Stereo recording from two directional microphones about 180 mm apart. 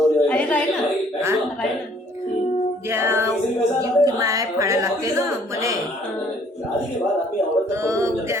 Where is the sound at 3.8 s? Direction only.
20° right (ahead or behind).